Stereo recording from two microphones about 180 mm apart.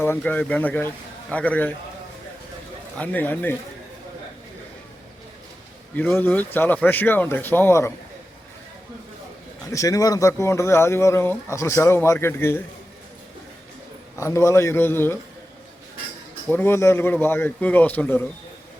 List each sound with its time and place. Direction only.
0.0 s speech: 10° left (ahead or behind)
3.0 s speech: 10° left (ahead or behind)
6.0 s speech: 10° left (ahead or behind)
9.7 s speech: 20° left (ahead or behind)
14.2 s speech: 15° left (ahead or behind)
16.5 s speech: 10° left (ahead or behind)